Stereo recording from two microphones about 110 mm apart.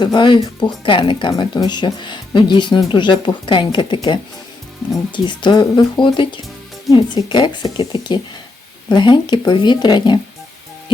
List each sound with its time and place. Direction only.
0.0 s speech: 45° left (ahead or behind)